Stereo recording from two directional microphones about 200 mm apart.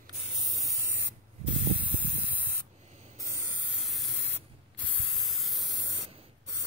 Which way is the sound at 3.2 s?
15° right (ahead or behind).